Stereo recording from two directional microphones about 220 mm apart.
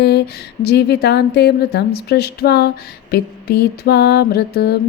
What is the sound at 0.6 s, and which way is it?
A woman's voice, 50° left (ahead or behind).